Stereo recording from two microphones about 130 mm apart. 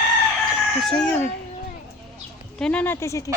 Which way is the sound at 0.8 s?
5° left (ahead or behind).